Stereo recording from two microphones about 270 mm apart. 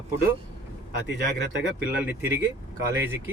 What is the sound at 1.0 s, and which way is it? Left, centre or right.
Speech, right.